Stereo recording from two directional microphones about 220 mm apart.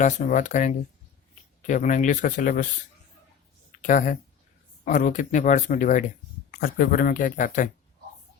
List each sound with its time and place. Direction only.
0.0 s speech: 35° left (ahead or behind)
3.8 s speech: 35° left (ahead or behind)